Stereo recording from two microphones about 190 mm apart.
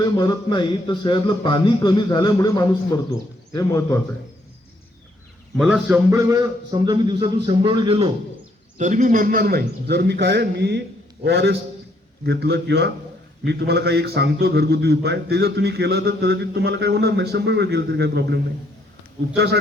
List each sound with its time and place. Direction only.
0.0 s a man's voice: 20° left (ahead or behind)
5.5 s a man's voice: 5° right (ahead or behind)
6.1 s a man's voice: 20° right (ahead or behind)
8.8 s a man's voice: 40° right (ahead or behind); by 18.3 s 60° right (ahead or behind)